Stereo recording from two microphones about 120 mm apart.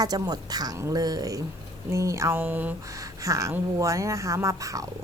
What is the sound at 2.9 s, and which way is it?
Speech, 30° right (ahead or behind).